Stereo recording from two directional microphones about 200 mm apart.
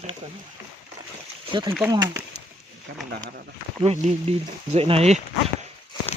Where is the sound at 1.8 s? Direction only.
15° right (ahead or behind).